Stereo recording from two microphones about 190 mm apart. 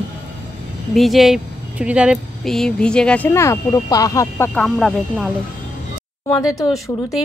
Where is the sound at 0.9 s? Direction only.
Centre (ahead or behind); by 4.5 s 15° left (ahead or behind).